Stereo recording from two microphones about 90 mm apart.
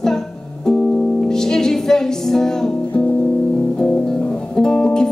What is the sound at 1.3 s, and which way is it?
Music, 5° left (ahead or behind).